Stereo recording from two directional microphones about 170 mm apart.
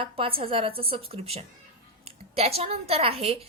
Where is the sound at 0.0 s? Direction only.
30° right (ahead or behind).